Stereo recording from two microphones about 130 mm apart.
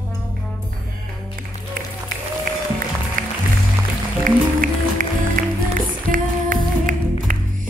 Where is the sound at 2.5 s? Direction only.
90° right.